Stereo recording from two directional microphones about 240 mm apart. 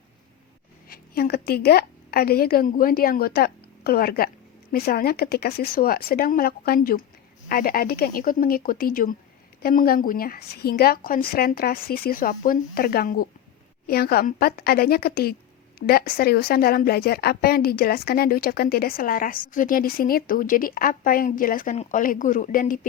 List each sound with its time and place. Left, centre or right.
0.9 s a woman's voice: left